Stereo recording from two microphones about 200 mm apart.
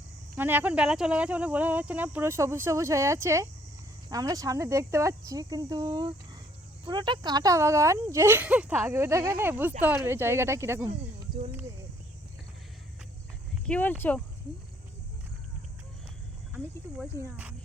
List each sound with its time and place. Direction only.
0.3 s speech: 10° right (ahead or behind)
13.7 s speech: 5° left (ahead or behind)
17.0 s speech: 5° right (ahead or behind)